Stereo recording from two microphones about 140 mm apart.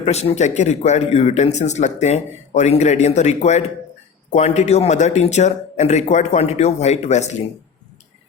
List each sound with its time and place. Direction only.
0.0 s speech: 50° left (ahead or behind)